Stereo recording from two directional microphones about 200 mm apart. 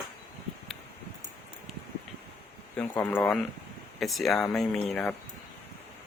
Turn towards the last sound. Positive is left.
turn(degrees=0)  # may be behind; listen again after turning